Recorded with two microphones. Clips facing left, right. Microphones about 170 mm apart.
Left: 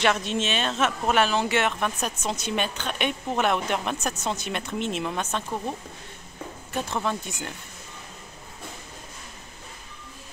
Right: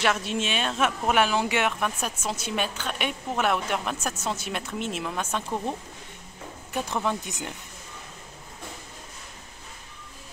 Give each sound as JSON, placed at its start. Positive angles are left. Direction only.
{"t": 0.0, "sound": "a woman's voice", "side_deg": -5}